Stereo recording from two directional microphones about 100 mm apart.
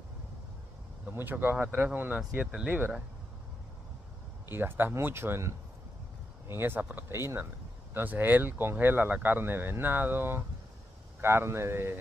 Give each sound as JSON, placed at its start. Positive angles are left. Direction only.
{"t": 1.0, "sound": "speech", "side_deg": -20}
{"t": 4.5, "sound": "speech", "side_deg": -20}